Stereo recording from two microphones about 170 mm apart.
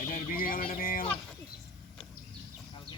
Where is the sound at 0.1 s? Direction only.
55° left (ahead or behind).